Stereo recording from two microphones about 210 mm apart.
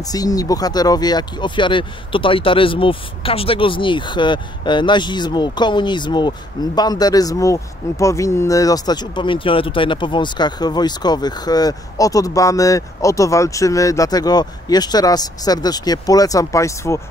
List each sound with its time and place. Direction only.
0.0 s speech: 15° left (ahead or behind)